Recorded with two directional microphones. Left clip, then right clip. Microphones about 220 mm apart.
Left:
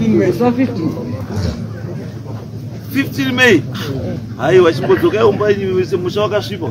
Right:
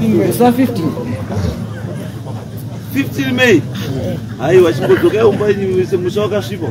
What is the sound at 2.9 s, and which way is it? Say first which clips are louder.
Speech: even; 15° left (ahead or behind).